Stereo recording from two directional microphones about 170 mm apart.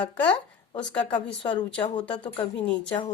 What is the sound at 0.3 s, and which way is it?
A woman's voice, 25° left (ahead or behind).